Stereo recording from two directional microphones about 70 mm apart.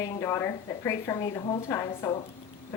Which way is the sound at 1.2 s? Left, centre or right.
Left.